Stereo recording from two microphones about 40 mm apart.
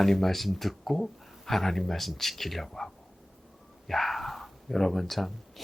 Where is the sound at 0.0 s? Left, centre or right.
Centre.